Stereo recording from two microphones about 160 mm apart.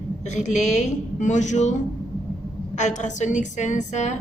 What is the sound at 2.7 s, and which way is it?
A woman's voice, 50° left (ahead or behind).